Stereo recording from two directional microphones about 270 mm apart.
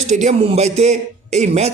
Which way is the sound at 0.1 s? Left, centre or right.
Right.